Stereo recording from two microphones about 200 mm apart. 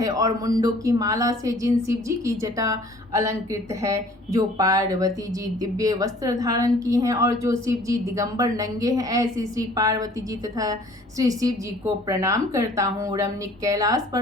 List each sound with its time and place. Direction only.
0.0 s a woman's voice: 20° right (ahead or behind)
11.2 s a woman's voice: 15° right (ahead or behind)